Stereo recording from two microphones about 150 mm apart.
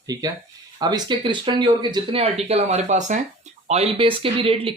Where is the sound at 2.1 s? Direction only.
45° right (ahead or behind).